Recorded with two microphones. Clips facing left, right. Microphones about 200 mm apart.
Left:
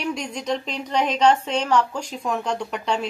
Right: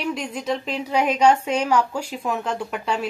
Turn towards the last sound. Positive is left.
turn(degrees=-5)  # may be behind; listen again after turning